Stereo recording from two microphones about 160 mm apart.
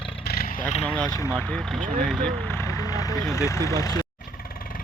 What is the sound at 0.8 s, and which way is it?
Speech, 5° left (ahead or behind).